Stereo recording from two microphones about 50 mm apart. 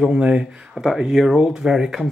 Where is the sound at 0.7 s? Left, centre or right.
Centre.